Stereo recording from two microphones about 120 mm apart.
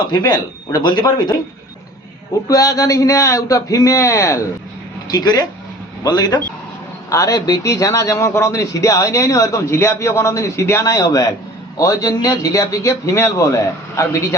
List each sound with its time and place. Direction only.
0.1 s speech: 35° left (ahead or behind)
2.5 s a man's voice: 30° left (ahead or behind)